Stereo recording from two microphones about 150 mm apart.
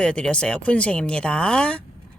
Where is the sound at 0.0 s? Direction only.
5° left (ahead or behind).